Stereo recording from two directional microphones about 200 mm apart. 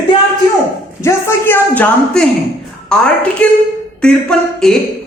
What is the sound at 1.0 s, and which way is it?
Speech, 15° left (ahead or behind).